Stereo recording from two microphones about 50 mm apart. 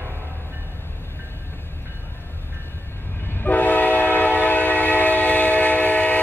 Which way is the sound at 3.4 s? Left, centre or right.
Left.